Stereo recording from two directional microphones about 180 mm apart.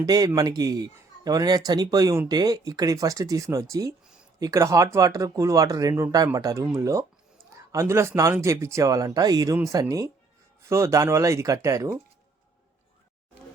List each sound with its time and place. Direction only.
0.0 s speech: 20° right (ahead or behind)